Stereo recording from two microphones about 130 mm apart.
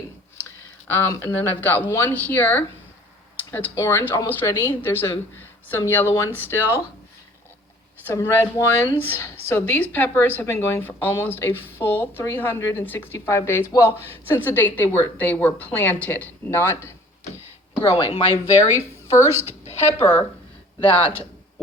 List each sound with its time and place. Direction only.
0.9 s speech: 20° left (ahead or behind)
8.0 s speech: 20° left (ahead or behind)
17.7 s speech: 45° left (ahead or behind)
19.3 s a woman's voice: 20° right (ahead or behind)
20.8 s speech: 10° left (ahead or behind)